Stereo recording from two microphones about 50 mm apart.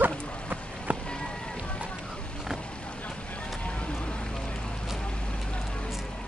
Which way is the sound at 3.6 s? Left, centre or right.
Left.